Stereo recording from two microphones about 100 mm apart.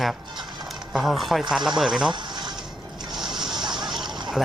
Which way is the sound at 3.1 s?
5° right (ahead or behind).